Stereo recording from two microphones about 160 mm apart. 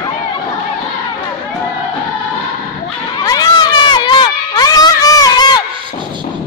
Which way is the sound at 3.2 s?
25° left (ahead or behind).